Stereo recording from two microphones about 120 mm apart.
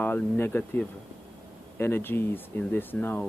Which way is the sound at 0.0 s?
15° left (ahead or behind).